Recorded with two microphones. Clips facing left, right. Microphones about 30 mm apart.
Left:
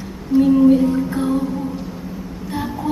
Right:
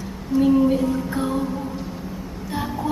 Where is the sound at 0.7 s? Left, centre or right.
Centre.